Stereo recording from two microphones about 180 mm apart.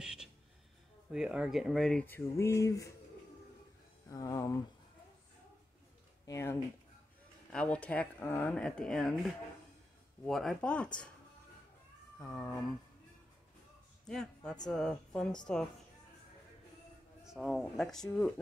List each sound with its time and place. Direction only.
0.0 s a sound: 5° right (ahead or behind)
1.1 s speech: 5° right (ahead or behind); by 2.9 s 15° left (ahead or behind)
4.1 s speech: 20° left (ahead or behind)
6.2 s speech: 15° left (ahead or behind)
12.2 s speech: 10° left (ahead or behind)
14.0 s a man's voice: 5° left (ahead or behind)
17.2 s speech: centre (ahead or behind)